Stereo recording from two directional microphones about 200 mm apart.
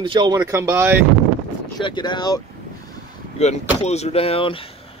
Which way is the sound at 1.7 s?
20° left (ahead or behind).